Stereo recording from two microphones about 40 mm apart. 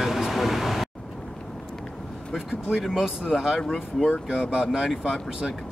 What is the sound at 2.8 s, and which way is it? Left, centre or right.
Speech, centre.